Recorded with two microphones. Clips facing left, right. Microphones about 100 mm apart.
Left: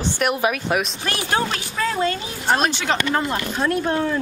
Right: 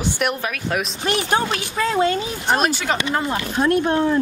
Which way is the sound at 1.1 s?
20° right (ahead or behind).